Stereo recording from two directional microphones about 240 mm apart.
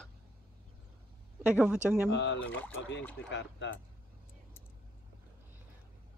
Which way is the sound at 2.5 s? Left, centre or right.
Centre.